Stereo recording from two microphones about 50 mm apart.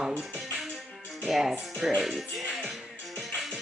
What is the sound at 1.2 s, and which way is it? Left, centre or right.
Speech, centre.